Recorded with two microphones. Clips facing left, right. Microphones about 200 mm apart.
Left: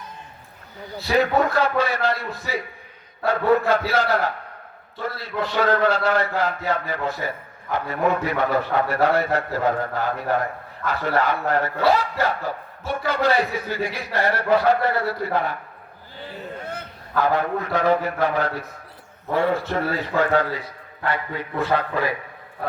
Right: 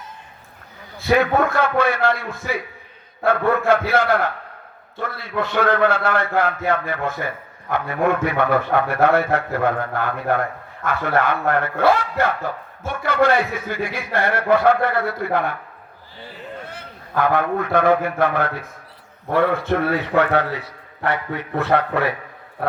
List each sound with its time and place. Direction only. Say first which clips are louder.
1.0 s a man's voice: right 2 dB; 55° right (ahead or behind)
17.2 s a man's voice: right 2 dB; 55° right (ahead or behind)